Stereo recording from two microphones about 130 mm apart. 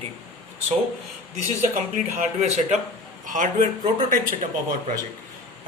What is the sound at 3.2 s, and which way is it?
Speech, 80° right.